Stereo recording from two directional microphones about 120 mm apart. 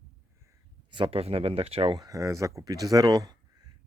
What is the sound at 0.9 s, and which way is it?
Speech, 50° right (ahead or behind).